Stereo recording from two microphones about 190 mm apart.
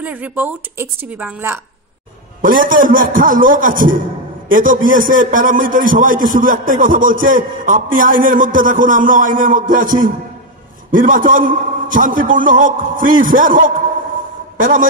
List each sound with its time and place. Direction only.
0.0 s a woman's voice: 10° right (ahead or behind)
2.4 s a man's voice: 45° right (ahead or behind)